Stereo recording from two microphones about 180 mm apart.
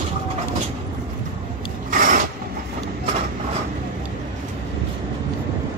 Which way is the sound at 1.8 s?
50° right (ahead or behind).